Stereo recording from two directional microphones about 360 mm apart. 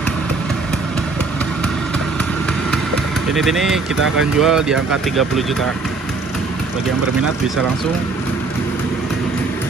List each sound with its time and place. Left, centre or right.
3.3 s speech: centre